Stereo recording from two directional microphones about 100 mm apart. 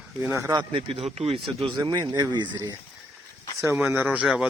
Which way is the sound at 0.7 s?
70° right (ahead or behind).